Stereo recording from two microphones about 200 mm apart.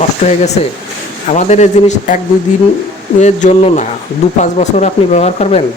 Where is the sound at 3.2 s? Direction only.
35° left (ahead or behind).